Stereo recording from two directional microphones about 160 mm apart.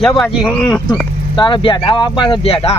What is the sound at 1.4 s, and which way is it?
Speech, 30° left (ahead or behind).